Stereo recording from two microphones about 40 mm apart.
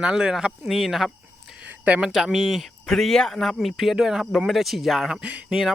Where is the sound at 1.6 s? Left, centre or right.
Right.